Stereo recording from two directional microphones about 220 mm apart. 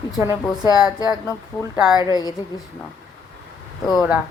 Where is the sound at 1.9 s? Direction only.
20° left (ahead or behind).